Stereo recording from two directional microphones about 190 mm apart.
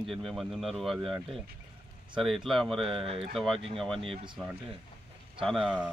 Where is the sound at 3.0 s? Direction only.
30° right (ahead or behind).